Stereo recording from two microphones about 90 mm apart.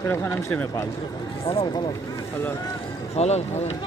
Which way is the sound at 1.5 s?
90° left.